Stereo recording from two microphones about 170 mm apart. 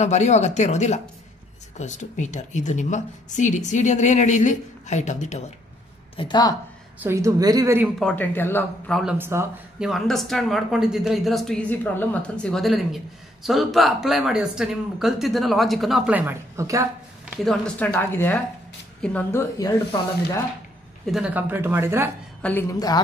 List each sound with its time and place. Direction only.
0.0 s a woman's voice: 40° left (ahead or behind)
6.1 s speech: 25° left (ahead or behind)
7.0 s speech: 15° right (ahead or behind)
8.0 s a woman's voice: 10° left (ahead or behind)
9.2 s speech: 15° right (ahead or behind)
9.8 s speech: centre (ahead or behind); by 16.8 s 20° right (ahead or behind)
17.5 s a woman's voice: 5° left (ahead or behind)
19.6 s speech: 20° left (ahead or behind)
21.0 s speech: 5° right (ahead or behind)
22.4 s a woman's voice: 10° left (ahead or behind)